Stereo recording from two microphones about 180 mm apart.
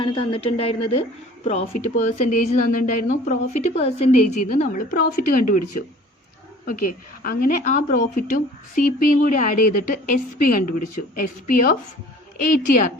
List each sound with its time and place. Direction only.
0.0 s a woman's voice: 30° left (ahead or behind); by 5.5 s 50° left (ahead or behind)
7.2 s a woman's voice: 50° left (ahead or behind)